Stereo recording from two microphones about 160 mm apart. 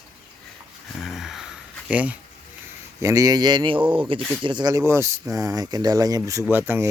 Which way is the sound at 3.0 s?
20° right (ahead or behind).